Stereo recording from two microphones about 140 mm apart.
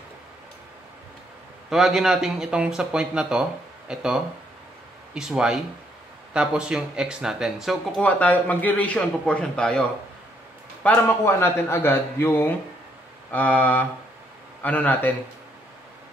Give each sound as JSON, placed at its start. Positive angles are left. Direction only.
{"t": 1.7, "sound": "speech", "side_deg": 0}
{"t": 8.0, "sound": "a man's voice", "side_deg": 10}